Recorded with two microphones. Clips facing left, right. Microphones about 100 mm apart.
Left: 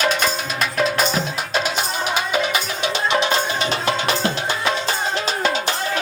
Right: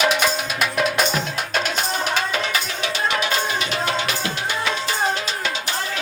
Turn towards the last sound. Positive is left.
turn(degrees=30)  # may be behind; listen again after turning